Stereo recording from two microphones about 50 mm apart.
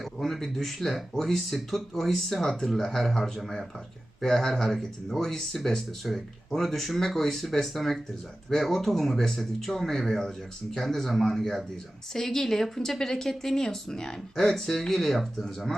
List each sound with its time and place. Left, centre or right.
0.0 s speech: centre